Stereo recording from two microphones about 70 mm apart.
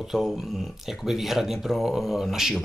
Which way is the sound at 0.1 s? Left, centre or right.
Centre.